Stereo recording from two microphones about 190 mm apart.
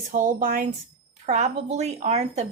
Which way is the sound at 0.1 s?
45° right (ahead or behind).